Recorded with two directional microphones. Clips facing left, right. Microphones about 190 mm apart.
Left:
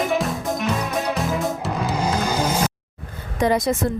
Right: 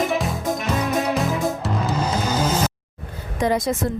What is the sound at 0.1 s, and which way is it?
Music, centre (ahead or behind).